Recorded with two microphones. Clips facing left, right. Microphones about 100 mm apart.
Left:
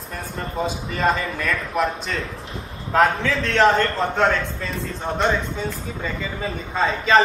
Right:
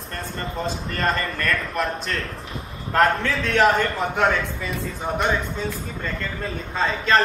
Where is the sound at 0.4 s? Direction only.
5° left (ahead or behind).